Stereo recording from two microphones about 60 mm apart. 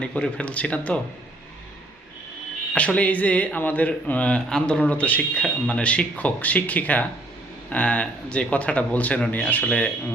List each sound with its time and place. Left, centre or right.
0.0 s speech: centre
2.7 s speech: left